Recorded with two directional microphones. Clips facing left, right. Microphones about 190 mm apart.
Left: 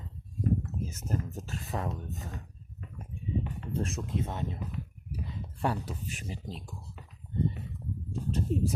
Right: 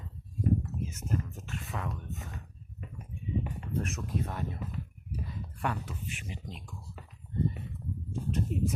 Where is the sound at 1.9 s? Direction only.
35° left (ahead or behind).